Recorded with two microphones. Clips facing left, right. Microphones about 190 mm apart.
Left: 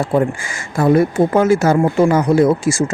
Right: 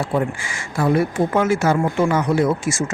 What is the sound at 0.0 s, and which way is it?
Speech, 45° left (ahead or behind).